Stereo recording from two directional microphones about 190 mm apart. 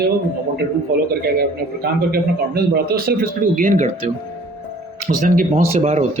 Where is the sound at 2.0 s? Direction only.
55° right (ahead or behind).